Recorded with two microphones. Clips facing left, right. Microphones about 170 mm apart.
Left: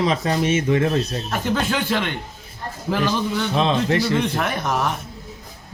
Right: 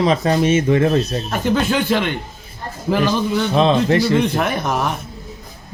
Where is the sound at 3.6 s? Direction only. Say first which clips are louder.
Right 5 dB; 40° right (ahead or behind).